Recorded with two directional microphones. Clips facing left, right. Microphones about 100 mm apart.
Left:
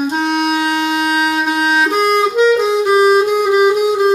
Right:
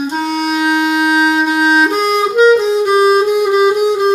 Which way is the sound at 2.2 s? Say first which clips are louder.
Right 3 dB; 5° right (ahead or behind).